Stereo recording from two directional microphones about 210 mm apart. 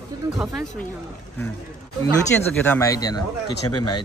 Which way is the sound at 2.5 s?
10° left (ahead or behind).